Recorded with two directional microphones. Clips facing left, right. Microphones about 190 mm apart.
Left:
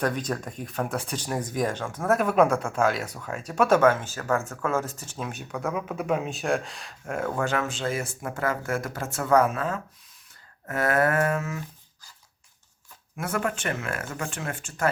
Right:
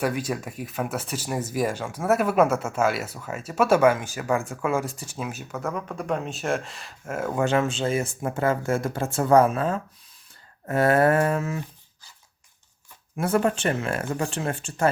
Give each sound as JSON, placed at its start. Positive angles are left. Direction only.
{"t": 0.0, "sound": "speech", "side_deg": -10}
{"t": 7.3, "sound": "speech", "side_deg": -25}
{"t": 13.1, "sound": "speech", "side_deg": -30}